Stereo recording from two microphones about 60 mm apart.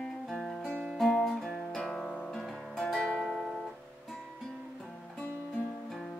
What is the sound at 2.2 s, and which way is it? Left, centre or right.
Music, centre.